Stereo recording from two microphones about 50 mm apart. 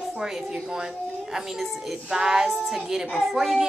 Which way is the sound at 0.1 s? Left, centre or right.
Centre.